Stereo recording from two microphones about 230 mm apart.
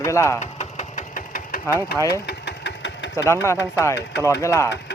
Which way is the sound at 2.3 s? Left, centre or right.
Left.